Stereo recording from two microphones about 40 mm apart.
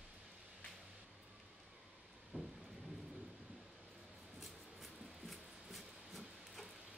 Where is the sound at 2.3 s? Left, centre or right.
Right.